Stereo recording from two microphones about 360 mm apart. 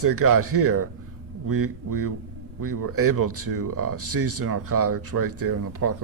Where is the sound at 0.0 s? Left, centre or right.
Right.